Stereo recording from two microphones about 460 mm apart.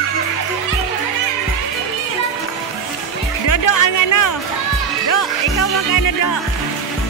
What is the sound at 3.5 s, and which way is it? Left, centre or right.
Music, left.